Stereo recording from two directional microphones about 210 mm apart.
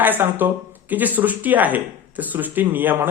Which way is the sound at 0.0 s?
10° right (ahead or behind).